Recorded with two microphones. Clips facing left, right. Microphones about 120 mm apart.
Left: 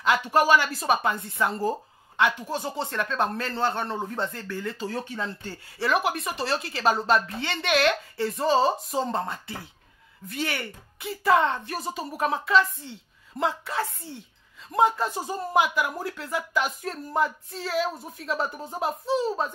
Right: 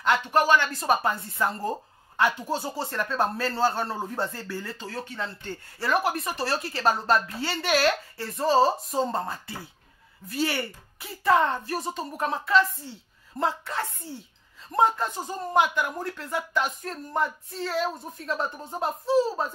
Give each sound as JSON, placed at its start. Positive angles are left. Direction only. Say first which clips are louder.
{"t": 0.3, "sound": "a woman's voice", "louder": "left 2 dB", "side_deg": 10}
{"t": 4.7, "sound": "speech", "louder": "left 3 dB", "side_deg": 15}
{"t": 5.7, "sound": "a woman's voice", "louder": "left 1 dB", "side_deg": 0}